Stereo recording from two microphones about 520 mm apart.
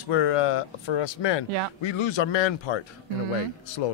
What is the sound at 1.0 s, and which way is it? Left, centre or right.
Speech, left.